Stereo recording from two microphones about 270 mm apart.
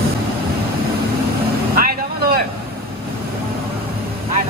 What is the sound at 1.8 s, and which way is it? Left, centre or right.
Vehicle, right.